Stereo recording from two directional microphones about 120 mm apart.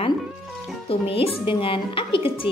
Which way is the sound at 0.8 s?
55° left (ahead or behind).